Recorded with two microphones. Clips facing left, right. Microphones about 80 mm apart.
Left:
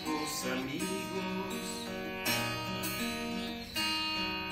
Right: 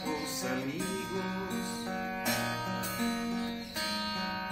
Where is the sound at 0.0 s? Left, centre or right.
Centre.